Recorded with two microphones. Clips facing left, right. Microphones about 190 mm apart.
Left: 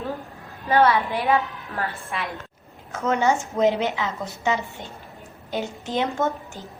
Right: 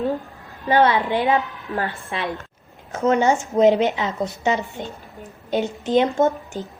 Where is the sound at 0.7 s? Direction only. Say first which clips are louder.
Right 2 dB; 20° right (ahead or behind).